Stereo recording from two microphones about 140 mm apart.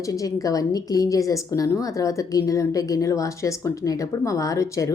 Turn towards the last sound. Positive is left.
turn(degrees=20)  # may be behind; listen again after turning